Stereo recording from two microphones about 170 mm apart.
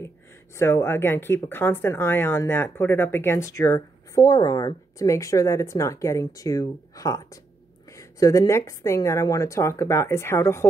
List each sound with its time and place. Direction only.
0.6 s speech: 15° left (ahead or behind)